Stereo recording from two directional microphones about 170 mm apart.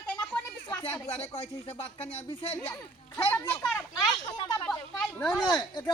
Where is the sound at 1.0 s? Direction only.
35° left (ahead or behind).